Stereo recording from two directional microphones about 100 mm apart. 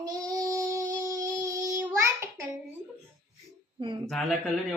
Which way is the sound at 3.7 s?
55° right (ahead or behind).